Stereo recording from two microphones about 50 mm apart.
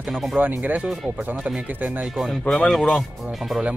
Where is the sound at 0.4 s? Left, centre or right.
Right.